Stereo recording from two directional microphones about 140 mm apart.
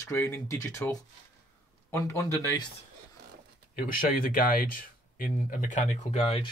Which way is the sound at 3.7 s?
90° left.